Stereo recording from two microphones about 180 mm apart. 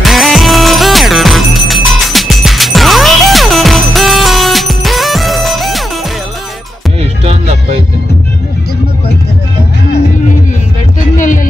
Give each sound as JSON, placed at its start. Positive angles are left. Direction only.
{"t": 0.0, "sound": "music", "side_deg": 0}
{"t": 11.1, "sound": "music", "side_deg": 45}